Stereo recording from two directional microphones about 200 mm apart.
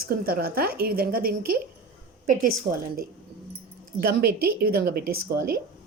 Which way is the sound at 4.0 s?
50° right (ahead or behind).